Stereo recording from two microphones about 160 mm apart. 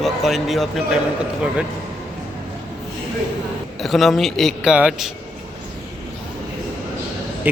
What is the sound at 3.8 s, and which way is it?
A man's voice, centre (ahead or behind).